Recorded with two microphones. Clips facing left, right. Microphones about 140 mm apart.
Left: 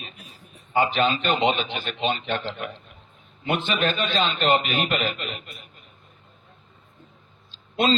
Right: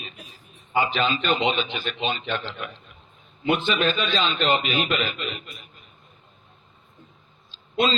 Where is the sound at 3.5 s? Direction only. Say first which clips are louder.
Left 1 dB; 55° left (ahead or behind).